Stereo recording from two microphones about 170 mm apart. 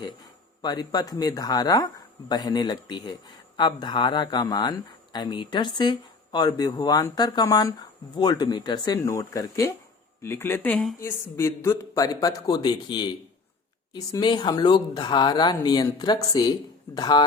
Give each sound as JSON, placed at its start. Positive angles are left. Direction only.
{"t": 0.6, "sound": "speech", "side_deg": 25}
{"t": 11.0, "sound": "speech", "side_deg": 15}